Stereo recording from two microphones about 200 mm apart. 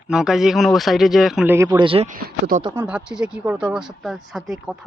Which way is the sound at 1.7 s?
25° right (ahead or behind).